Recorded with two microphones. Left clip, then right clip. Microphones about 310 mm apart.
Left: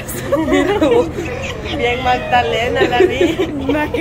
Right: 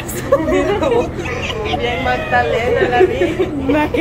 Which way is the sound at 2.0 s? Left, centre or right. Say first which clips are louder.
Left 1 dB; left.